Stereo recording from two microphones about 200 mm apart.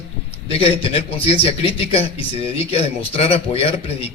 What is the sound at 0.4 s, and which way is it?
Speech, 30° left (ahead or behind).